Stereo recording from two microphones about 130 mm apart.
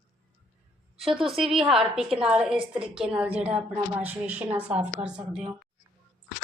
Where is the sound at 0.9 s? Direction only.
Centre (ahead or behind).